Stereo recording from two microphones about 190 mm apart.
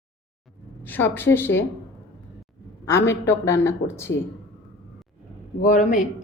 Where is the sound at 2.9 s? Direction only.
15° left (ahead or behind).